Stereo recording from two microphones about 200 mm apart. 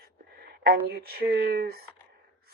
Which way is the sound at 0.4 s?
50° right (ahead or behind).